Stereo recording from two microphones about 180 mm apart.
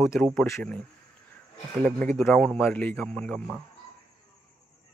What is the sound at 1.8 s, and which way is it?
Speech, 5° left (ahead or behind).